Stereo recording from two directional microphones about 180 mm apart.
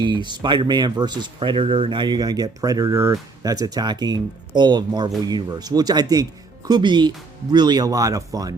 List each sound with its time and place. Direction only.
0.0 s speech: 25° right (ahead or behind)